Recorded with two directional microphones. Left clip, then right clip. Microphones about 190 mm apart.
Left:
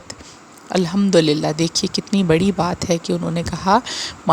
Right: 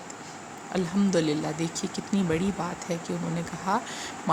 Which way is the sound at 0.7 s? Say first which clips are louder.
Left 10 dB; 45° left (ahead or behind).